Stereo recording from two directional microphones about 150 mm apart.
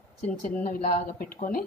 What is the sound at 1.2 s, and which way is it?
Speech, 65° left (ahead or behind).